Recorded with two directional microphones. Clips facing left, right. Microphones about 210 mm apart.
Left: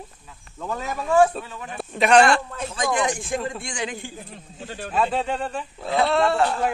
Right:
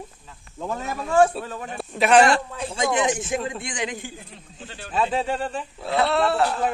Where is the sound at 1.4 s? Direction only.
40° right (ahead or behind).